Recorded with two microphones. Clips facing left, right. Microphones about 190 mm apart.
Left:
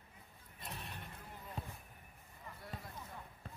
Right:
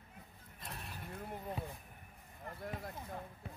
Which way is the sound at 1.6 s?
5° right (ahead or behind).